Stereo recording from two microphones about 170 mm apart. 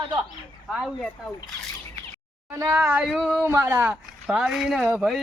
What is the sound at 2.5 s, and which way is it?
Speech, 15° right (ahead or behind).